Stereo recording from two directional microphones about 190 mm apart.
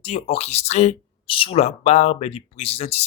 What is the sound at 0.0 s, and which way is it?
Speech, 30° left (ahead or behind).